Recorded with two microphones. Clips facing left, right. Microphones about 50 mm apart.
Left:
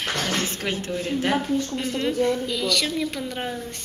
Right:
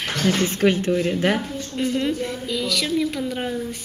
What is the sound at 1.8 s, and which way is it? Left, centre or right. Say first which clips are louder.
A woman's voice: even; centre.